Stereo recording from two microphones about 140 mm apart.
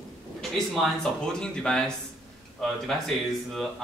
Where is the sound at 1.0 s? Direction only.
5° left (ahead or behind).